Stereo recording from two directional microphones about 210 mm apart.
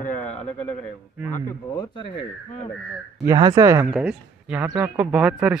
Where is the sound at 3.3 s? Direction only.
20° right (ahead or behind).